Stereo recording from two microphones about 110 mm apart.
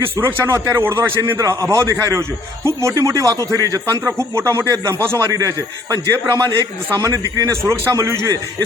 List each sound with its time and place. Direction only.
0.2 s a man's voice: 25° right (ahead or behind)